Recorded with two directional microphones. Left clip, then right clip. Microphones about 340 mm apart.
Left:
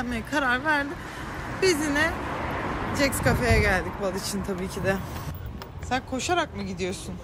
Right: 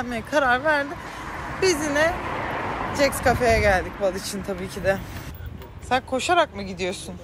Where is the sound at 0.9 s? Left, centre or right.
Centre.